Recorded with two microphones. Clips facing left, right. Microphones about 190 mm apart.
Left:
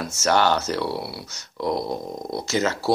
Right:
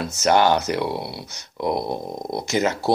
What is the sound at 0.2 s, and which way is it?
Speech, 15° right (ahead or behind).